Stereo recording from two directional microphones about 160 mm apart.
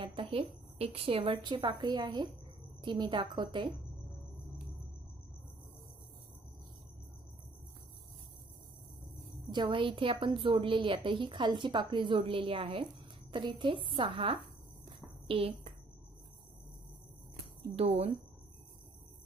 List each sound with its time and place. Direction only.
0.0 s a woman's voice: 35° right (ahead or behind)
9.5 s a woman's voice: 30° right (ahead or behind)
17.7 s a woman's voice: 40° right (ahead or behind)